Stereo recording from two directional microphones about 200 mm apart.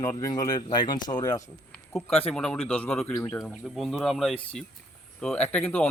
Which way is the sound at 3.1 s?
15° left (ahead or behind).